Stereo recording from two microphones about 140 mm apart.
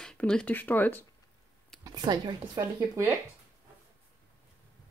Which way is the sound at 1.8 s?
30° right (ahead or behind).